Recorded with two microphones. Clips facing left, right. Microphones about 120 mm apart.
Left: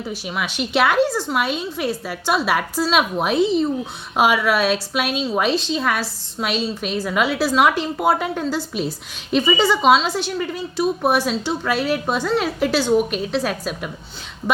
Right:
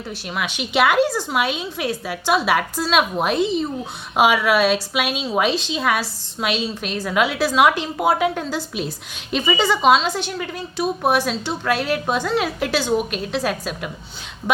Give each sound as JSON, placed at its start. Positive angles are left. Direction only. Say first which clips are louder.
{"t": 0.1, "sound": "a woman's voice", "louder": "right 2 dB", "side_deg": 0}